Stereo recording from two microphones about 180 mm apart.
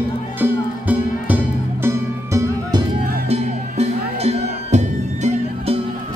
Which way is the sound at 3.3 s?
35° right (ahead or behind).